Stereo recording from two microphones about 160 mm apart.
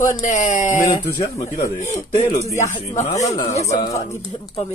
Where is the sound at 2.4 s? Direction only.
45° left (ahead or behind).